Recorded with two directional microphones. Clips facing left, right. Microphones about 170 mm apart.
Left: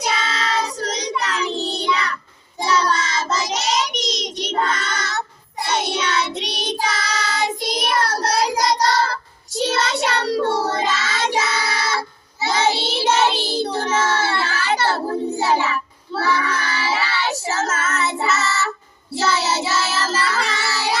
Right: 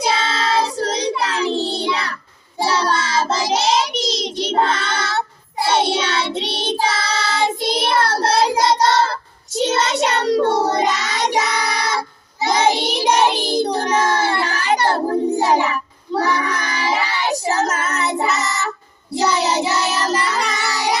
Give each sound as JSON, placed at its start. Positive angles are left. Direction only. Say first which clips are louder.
{"t": 0.0, "sound": "child singing", "louder": "right 4 dB", "side_deg": -30}